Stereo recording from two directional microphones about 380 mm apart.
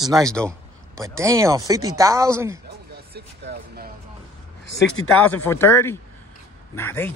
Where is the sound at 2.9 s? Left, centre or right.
Right.